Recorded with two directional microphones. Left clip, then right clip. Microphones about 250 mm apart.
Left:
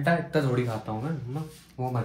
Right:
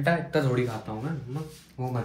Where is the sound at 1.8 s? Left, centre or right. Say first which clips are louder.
Left 2 dB; left.